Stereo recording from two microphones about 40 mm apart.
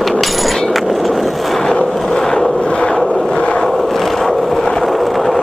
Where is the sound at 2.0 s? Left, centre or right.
Centre.